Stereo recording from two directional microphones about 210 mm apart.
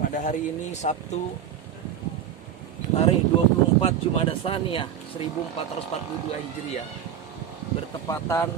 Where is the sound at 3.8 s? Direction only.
25° left (ahead or behind).